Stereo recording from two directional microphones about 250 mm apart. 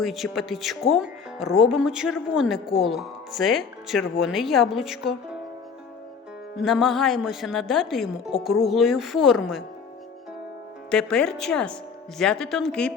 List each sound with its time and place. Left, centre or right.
0.0 s a woman's voice: centre
6.6 s a woman's voice: centre
10.9 s a woman's voice: centre